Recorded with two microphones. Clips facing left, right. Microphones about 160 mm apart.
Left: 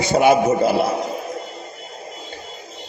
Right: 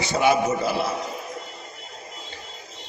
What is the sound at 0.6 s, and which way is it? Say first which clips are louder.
Speech: left 7 dB; 55° left (ahead or behind).